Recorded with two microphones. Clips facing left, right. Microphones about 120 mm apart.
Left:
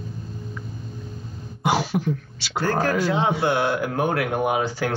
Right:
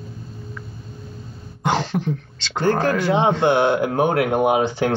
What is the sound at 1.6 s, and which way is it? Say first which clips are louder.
Throat clearing: right 1 dB; 10° left (ahead or behind).